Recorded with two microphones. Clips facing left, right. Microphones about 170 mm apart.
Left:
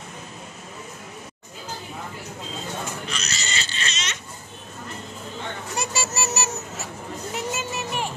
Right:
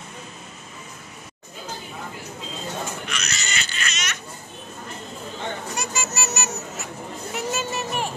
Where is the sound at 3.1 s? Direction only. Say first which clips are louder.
Even; 35° left (ahead or behind).